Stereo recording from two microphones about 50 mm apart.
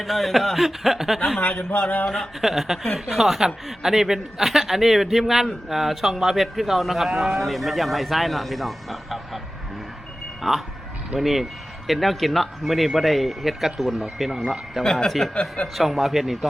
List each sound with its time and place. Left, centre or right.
0.0 s a man's voice: centre
1.5 s speech: left
2.0 s a man's voice: centre
10.4 s a man's voice: centre
15.0 s speech: centre
15.6 s a man's voice: centre